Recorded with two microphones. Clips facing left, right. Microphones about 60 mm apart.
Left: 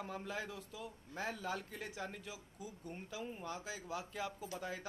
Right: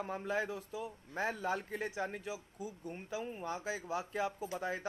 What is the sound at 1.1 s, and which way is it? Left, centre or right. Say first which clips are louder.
Speech: right 6 dB; right.